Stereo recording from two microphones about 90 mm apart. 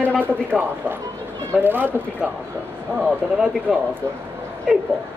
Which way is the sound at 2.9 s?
5° right (ahead or behind).